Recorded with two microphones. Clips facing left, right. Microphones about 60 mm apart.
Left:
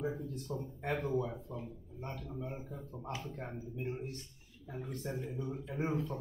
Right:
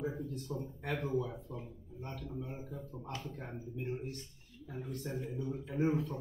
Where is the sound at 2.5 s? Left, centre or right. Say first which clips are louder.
Even; centre.